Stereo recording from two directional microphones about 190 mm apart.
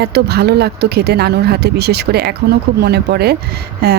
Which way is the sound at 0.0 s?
60° right (ahead or behind).